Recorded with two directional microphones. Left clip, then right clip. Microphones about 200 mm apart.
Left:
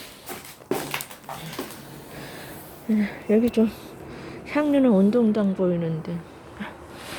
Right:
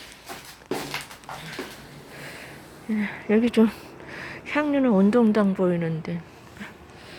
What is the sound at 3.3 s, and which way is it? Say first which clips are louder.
Speech: even; centre (ahead or behind).